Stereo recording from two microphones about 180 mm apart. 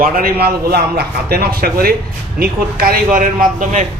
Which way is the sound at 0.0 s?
55° right (ahead or behind).